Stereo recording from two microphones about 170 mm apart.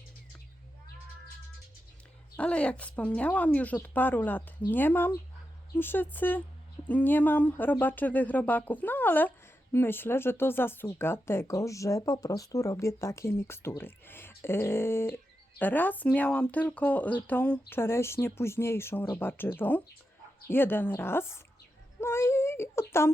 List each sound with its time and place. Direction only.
2.3 s speech: 5° left (ahead or behind)